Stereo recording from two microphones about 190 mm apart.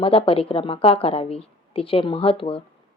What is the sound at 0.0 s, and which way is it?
Speech, 30° left (ahead or behind).